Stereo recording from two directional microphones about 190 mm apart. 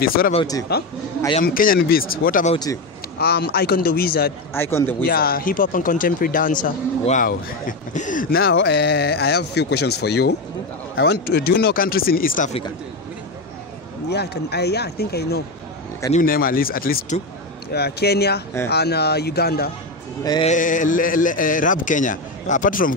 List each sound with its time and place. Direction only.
0.0 s speech: 50° left (ahead or behind)
2.5 s a man's voice: 20° left (ahead or behind)
3.2 s speech: 55° left (ahead or behind)
4.6 s speech: 10° left (ahead or behind)
5.0 s speech: 50° left (ahead or behind)
14.1 s speech: 60° left (ahead or behind)
16.1 s speech: 45° left (ahead or behind)
20.4 s speech: 45° left (ahead or behind)